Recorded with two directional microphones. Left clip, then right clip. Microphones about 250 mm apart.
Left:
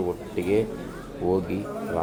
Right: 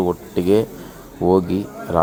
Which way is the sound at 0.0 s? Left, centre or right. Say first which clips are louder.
Right 7 dB; right.